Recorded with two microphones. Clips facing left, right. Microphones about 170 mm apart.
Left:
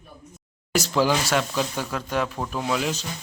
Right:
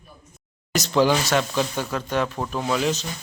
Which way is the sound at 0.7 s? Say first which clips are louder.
Right 2 dB; 5° left (ahead or behind).